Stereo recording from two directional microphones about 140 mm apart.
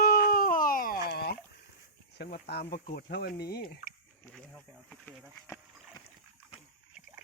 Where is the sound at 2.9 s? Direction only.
90° left.